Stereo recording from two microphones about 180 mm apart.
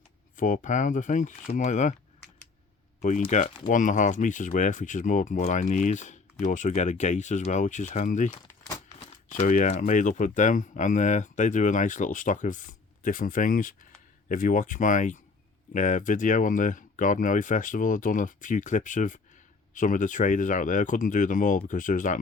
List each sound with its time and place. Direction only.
0.3 s speech: 45° left (ahead or behind)
3.0 s speech: 40° left (ahead or behind)
8.4 s crumpling: 15° left (ahead or behind)
9.0 s speech: 40° left (ahead or behind)